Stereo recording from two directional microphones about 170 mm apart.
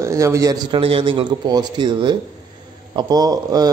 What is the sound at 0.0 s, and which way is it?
Speech, 15° right (ahead or behind).